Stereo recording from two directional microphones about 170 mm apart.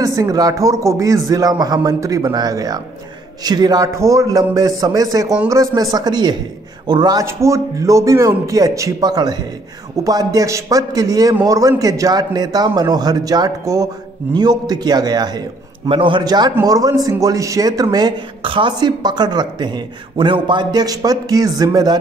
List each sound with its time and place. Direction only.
0.0 s speech: 20° right (ahead or behind)